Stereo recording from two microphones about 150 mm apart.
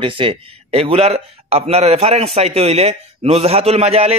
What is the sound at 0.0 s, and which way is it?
A man's voice, 35° right (ahead or behind).